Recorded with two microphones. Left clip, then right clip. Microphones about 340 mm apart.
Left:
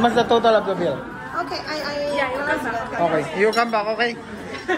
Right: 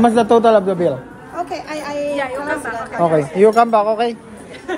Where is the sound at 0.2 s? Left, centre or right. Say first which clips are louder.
Right 5 dB; right.